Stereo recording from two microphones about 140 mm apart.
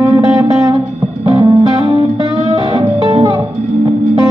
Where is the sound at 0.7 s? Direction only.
35° right (ahead or behind).